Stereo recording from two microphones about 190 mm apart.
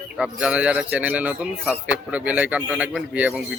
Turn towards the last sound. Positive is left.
turn(degrees=-5)  # may be behind; listen again after turning